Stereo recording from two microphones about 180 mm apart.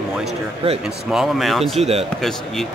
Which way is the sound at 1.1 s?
Centre (ahead or behind).